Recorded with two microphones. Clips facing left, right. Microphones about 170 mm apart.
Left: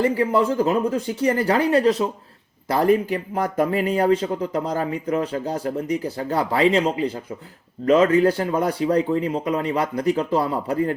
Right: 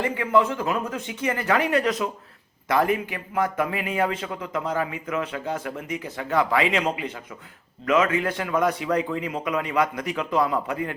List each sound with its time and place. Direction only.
0.0 s a man's voice: 35° left (ahead or behind)